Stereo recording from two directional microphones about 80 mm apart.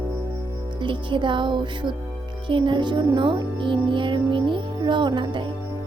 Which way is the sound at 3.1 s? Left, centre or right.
Right.